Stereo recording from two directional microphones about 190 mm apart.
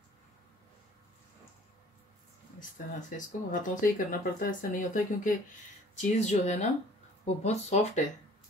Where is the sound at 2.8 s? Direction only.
45° left (ahead or behind).